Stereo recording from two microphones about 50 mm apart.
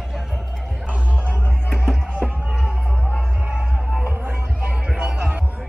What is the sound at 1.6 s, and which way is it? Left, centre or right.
Music, centre.